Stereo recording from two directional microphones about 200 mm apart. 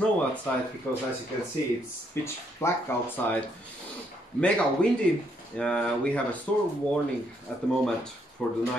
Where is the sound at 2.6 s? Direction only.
15° left (ahead or behind).